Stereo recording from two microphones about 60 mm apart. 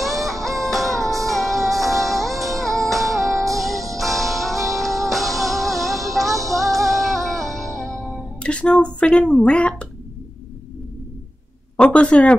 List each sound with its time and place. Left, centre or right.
0.0 s music: centre
2.3 s music: right
2.6 s music: centre
8.4 s a sound: centre
9.4 s speech: centre
11.7 s speech: centre